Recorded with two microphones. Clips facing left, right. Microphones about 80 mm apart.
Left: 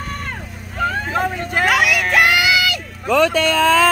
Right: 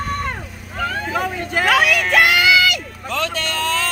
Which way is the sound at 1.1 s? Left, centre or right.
Left.